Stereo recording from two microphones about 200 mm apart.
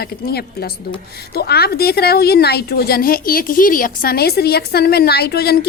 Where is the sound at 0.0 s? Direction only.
50° left (ahead or behind).